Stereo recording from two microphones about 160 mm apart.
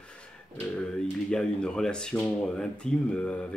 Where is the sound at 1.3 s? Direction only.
5° left (ahead or behind).